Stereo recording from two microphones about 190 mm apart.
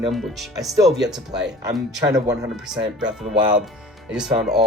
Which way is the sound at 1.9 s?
20° right (ahead or behind).